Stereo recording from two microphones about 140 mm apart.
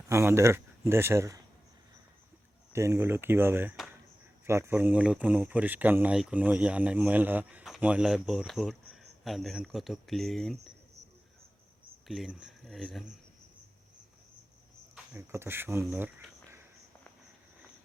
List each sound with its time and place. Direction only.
0.1 s speech: 20° right (ahead or behind)
2.7 s speech: 20° right (ahead or behind); by 10.7 s centre (ahead or behind)
12.0 s speech: centre (ahead or behind)
15.3 s speech: 15° right (ahead or behind)